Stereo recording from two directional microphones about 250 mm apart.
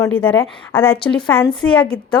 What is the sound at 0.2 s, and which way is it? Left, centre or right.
Speech, centre.